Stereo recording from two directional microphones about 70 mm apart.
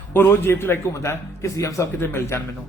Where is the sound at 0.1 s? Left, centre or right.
Left.